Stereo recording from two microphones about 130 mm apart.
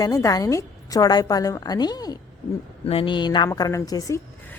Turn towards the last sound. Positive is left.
turn(degrees=25)  # may be behind; listen again after turning